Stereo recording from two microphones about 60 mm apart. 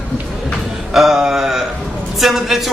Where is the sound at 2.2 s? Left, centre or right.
Centre.